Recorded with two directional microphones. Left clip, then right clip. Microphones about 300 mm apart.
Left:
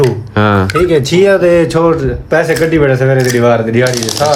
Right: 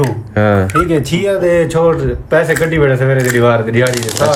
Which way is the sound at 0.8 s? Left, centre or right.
Left.